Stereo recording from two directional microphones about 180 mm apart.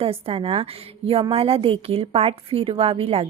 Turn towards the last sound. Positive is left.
turn(degrees=-35)  # may be behind; listen again after turning